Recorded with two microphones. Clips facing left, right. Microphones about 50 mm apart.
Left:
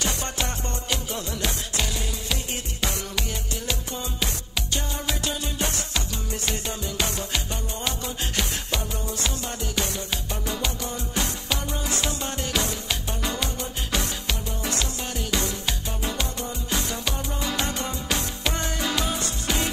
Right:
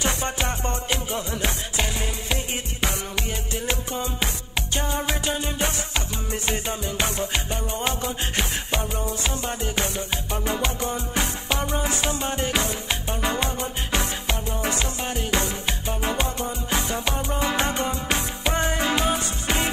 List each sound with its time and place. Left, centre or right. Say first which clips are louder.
0.0 s music: right 3 dB; right
10.4 s music: right 4 dB; right